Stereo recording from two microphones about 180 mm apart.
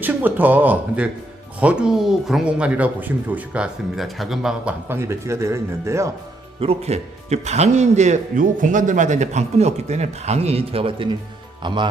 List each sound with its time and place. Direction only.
0.0 s speech: 10° right (ahead or behind)
6.6 s a man's voice: 35° right (ahead or behind)